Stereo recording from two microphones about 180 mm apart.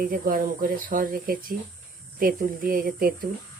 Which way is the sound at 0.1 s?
50° right (ahead or behind).